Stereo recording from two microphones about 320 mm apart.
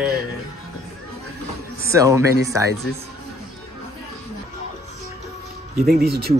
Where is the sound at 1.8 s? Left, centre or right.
Centre.